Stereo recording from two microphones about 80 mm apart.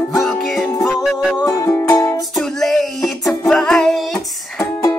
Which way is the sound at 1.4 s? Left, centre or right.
Left.